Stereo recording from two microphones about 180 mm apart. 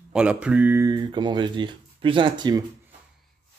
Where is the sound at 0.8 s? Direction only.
25° right (ahead or behind).